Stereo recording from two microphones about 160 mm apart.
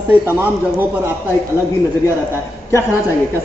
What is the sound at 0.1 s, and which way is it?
Speech, 10° right (ahead or behind).